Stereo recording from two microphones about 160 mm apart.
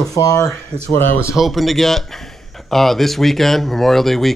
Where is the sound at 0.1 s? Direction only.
20° left (ahead or behind).